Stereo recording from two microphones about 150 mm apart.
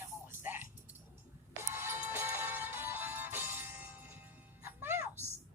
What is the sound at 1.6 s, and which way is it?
Music, 15° right (ahead or behind).